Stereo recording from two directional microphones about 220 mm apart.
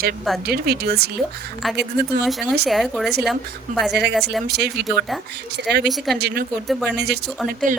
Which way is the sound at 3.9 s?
50° right (ahead or behind).